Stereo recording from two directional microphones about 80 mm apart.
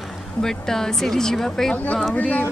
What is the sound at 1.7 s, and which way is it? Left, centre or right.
Speech, centre.